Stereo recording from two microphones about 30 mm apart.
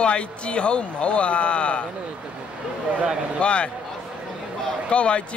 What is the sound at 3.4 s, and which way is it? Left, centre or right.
Speech, left.